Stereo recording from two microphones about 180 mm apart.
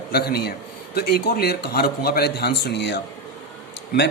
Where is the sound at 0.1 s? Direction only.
60° left (ahead or behind).